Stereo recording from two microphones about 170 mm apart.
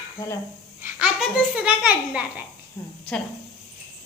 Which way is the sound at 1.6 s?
10° right (ahead or behind).